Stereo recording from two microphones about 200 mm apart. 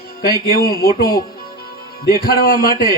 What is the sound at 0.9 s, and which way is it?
A man's voice, 45° left (ahead or behind).